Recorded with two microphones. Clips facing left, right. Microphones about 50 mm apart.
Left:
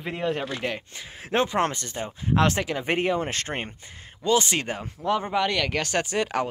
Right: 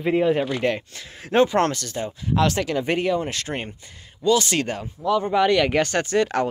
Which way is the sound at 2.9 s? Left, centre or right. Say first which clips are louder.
Right 2 dB; left.